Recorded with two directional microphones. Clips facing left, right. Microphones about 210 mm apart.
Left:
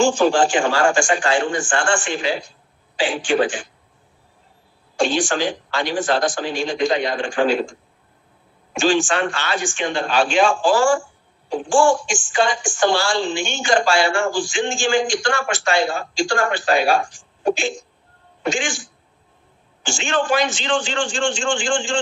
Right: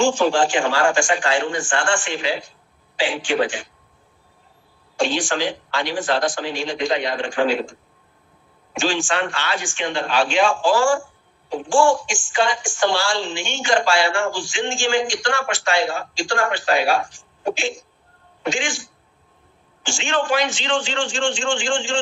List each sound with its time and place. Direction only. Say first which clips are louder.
0.0 s a woman's voice: left 2 dB; 45° left (ahead or behind)
4.9 s a woman's voice: left 2 dB; 45° left (ahead or behind)
8.8 s a woman's voice: left 4 dB; 45° left (ahead or behind)
19.8 s a woman's voice: left 1 dB; 45° left (ahead or behind)